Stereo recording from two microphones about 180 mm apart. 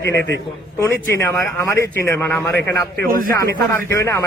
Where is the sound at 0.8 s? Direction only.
15° left (ahead or behind).